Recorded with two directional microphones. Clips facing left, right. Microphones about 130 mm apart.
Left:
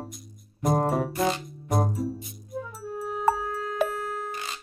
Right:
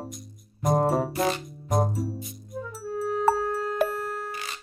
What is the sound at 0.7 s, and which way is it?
Music, 30° right (ahead or behind).